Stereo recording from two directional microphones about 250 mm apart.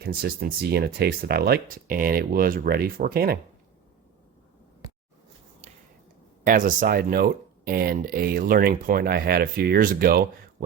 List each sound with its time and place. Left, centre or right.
0.0 s speech: right
6.4 s speech: right